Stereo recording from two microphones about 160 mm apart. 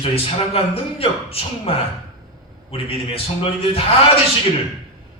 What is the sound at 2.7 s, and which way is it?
A man's voice, 35° left (ahead or behind).